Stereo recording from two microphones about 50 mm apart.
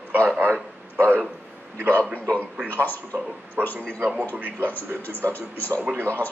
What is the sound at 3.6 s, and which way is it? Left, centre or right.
Speech, right.